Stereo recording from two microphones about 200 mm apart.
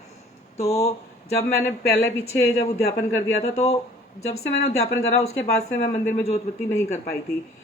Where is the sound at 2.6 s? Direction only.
30° left (ahead or behind).